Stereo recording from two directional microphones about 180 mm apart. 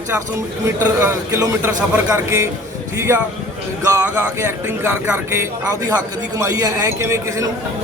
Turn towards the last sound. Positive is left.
turn(degrees=-15)  # may be behind; listen again after turning